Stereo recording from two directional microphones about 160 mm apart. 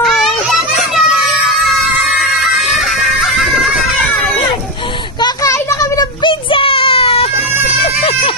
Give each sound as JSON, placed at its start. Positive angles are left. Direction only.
{"t": 0.0, "sound": "children playing", "side_deg": 0}
{"t": 5.2, "sound": "a sound", "side_deg": 20}
{"t": 7.8, "sound": "vehicle", "side_deg": 40}